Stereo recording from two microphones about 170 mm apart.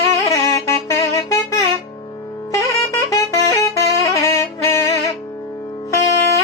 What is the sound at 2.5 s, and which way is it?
Music, 20° left (ahead or behind).